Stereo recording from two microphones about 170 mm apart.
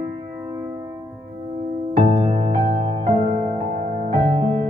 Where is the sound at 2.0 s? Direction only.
35° right (ahead or behind).